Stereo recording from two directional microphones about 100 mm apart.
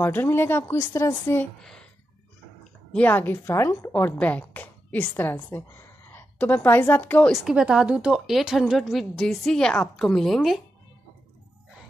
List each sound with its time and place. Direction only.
0.0 s speech: 20° left (ahead or behind)
1.6 s speech: 5° left (ahead or behind)
2.9 s a woman's voice: 15° left (ahead or behind)
7.2 s a woman's voice: 5° right (ahead or behind)